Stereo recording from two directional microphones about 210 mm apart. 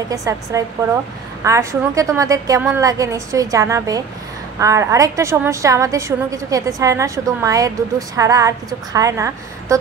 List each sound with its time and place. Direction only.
0.1 s a woman's voice: 15° right (ahead or behind)